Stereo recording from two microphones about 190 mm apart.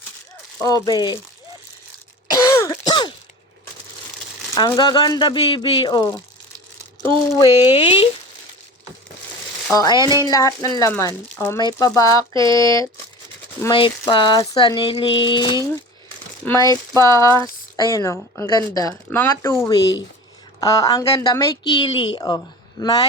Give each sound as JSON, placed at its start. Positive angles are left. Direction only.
{"t": 0.6, "sound": "a woman's voice", "side_deg": 20}
{"t": 2.2, "sound": "throat clearing", "side_deg": 20}
{"t": 4.7, "sound": "a woman's voice", "side_deg": 20}
{"t": 7.3, "sound": "a woman's voice", "side_deg": 20}
{"t": 9.7, "sound": "a woman's voice", "side_deg": 20}
{"t": 12.3, "sound": "a sound", "side_deg": -25}
{"t": 12.5, "sound": "a woman's voice", "side_deg": 15}